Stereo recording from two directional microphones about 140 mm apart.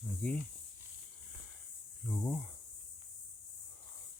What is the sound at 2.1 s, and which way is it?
Speech, 5° left (ahead or behind).